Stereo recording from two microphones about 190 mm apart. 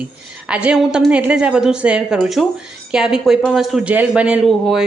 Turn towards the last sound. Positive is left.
turn(degrees=-5)  # may be behind; listen again after turning